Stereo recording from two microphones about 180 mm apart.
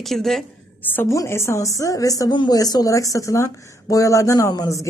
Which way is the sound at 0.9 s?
15° left (ahead or behind).